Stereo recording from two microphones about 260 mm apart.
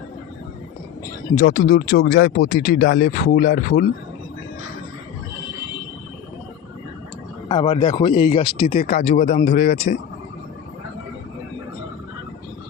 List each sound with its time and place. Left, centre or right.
1.4 s speech: left
7.4 s speech: centre